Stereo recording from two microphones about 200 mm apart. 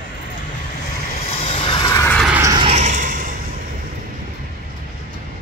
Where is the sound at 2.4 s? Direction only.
20° right (ahead or behind).